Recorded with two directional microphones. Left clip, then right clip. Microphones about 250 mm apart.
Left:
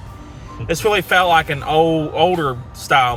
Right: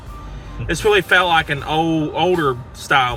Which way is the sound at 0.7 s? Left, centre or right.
Centre.